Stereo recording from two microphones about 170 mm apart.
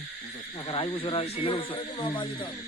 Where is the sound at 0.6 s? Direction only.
30° left (ahead or behind).